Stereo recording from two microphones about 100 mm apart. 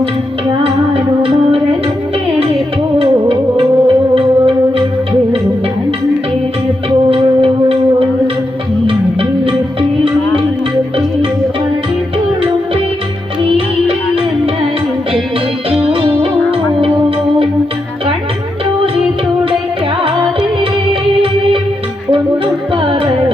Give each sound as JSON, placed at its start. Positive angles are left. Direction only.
{"t": 1.2, "sound": "music", "side_deg": -70}
{"t": 3.0, "sound": "music", "side_deg": -70}
{"t": 7.1, "sound": "music", "side_deg": -70}
{"t": 15.8, "sound": "music", "side_deg": -60}